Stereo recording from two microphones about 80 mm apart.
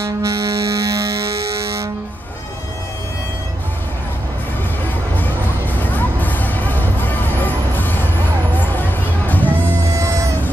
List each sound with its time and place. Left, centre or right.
0.0 s music: right
5.8 s music: left
9.9 s a sound: right